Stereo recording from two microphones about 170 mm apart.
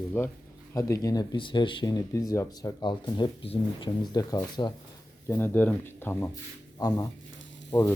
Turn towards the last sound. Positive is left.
turn(degrees=10)  # may be behind; listen again after turning